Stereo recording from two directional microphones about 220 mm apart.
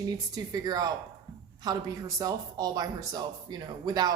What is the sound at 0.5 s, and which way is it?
A woman's voice, 15° right (ahead or behind).